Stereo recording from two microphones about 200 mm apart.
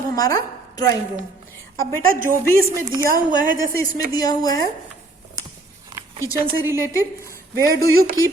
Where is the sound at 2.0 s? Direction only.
45° right (ahead or behind).